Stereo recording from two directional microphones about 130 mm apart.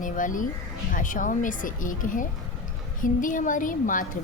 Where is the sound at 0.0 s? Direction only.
90° left.